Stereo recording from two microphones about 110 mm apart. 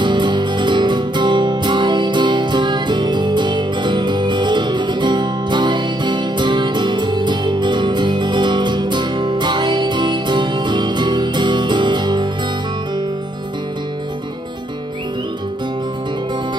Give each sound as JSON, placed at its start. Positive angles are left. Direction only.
{"t": 0.0, "sound": "music", "side_deg": -45}